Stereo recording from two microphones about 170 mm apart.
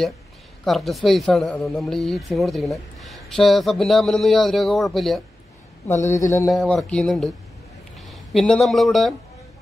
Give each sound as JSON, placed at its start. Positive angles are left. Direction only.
{"t": 0.7, "sound": "speech", "side_deg": 0}
{"t": 5.9, "sound": "a man's voice", "side_deg": 15}
{"t": 6.5, "sound": "speech", "side_deg": 0}